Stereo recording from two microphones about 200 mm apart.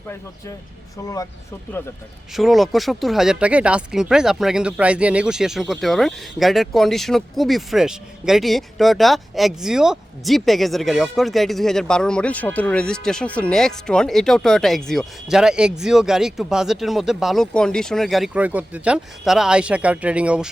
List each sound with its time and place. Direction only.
1.0 s speech: 15° left (ahead or behind)
2.3 s speech: centre (ahead or behind)